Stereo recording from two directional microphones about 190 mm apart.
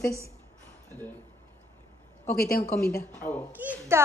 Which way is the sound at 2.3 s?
55° left (ahead or behind).